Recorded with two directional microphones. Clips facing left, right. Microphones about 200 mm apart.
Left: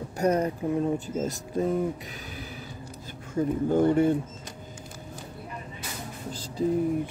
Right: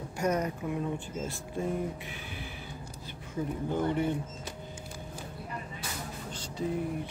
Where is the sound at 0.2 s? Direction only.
30° left (ahead or behind).